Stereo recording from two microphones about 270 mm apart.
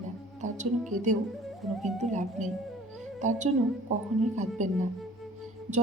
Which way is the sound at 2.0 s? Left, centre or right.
Right.